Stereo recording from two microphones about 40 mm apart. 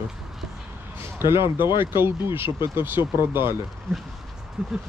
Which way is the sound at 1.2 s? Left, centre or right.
Right.